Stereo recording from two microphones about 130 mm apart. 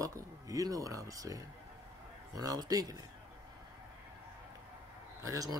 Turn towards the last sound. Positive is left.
turn(degrees=-25)  # may be behind; listen again after turning